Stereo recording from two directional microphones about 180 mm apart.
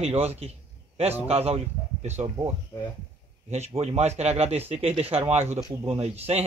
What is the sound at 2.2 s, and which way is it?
Speech, 20° right (ahead or behind).